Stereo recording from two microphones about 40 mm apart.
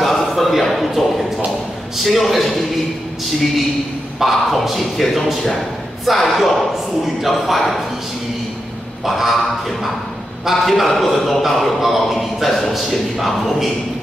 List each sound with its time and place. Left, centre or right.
0.0 s a sound: centre
2.0 s speech: centre
4.2 s speech: centre
9.0 s speech: centre
10.5 s speech: centre